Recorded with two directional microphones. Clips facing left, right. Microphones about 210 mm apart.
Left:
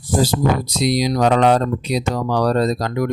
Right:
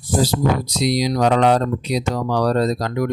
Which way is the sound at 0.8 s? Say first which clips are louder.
Left 1 dB; 50° left (ahead or behind).